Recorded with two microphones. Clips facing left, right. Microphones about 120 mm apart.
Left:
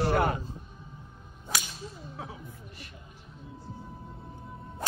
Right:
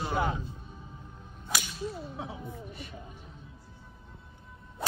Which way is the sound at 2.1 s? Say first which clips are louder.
Right 3 dB; 25° right (ahead or behind).